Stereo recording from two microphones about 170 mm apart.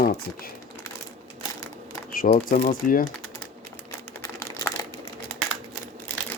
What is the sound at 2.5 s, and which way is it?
Speech, 55° left (ahead or behind).